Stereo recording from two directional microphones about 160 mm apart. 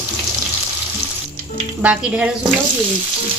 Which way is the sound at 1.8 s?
10° right (ahead or behind).